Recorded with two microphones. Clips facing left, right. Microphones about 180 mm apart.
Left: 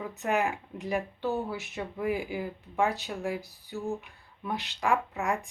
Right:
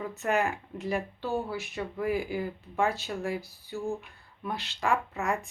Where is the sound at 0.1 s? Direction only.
15° left (ahead or behind).